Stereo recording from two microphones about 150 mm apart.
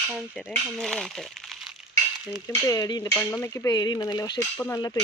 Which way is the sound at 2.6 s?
25° left (ahead or behind).